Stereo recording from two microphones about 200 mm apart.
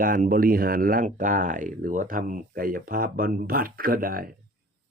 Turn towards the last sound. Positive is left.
turn(degrees=-45)  # may be behind; listen again after turning